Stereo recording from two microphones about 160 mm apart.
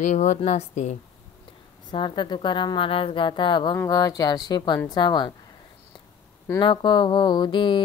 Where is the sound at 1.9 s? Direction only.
30° left (ahead or behind).